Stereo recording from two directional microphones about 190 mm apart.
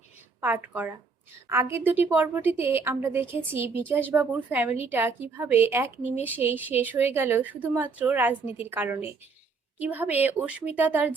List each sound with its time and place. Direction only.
0.4 s speech: 10° right (ahead or behind)